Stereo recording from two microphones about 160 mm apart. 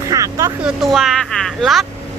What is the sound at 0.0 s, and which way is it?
Vehicle, 20° right (ahead or behind).